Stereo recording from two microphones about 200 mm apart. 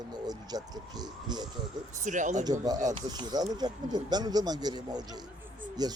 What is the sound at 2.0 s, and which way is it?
Speech, 40° right (ahead or behind).